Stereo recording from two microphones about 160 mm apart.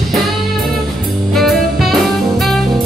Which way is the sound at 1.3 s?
Centre (ahead or behind).